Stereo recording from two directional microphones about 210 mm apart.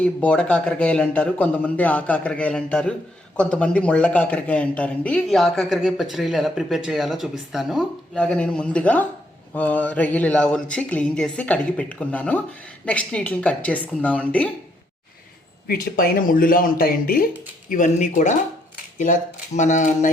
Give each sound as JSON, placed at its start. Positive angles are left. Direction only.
{"t": 0.0, "sound": "a man's voice", "side_deg": 5}
{"t": 15.6, "sound": "speech", "side_deg": 45}